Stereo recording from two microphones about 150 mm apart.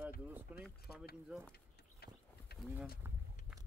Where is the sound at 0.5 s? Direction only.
10° right (ahead or behind).